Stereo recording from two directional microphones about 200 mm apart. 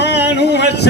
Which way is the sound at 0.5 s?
55° left (ahead or behind).